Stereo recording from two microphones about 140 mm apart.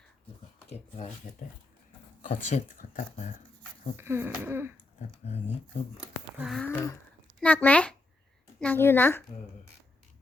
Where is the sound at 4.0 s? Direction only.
15° right (ahead or behind).